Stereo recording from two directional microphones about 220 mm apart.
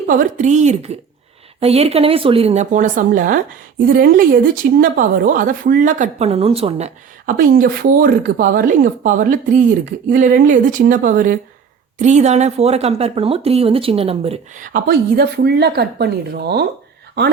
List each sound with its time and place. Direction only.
0.1 s speech: 35° right (ahead or behind)